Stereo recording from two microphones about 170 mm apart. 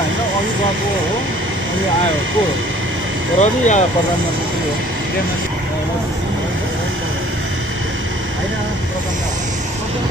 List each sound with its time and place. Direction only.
3.3 s speech: 45° left (ahead or behind)